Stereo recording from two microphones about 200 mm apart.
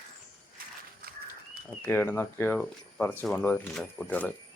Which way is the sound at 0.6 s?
45° right (ahead or behind).